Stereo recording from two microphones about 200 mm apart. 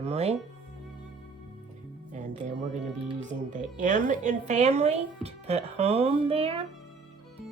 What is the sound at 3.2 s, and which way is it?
A woman's voice, 40° right (ahead or behind).